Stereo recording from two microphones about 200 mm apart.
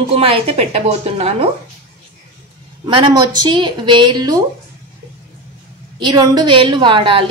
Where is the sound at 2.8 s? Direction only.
20° right (ahead or behind).